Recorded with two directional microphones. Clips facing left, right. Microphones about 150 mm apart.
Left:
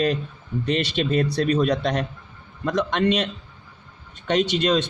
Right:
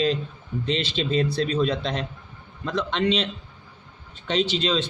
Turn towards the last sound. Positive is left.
turn(degrees=60)  # may be behind; listen again after turning